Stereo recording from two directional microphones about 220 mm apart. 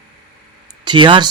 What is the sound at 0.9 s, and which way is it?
Speech, 20° right (ahead or behind).